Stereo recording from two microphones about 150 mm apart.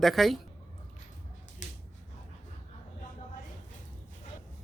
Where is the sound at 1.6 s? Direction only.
55° left (ahead or behind).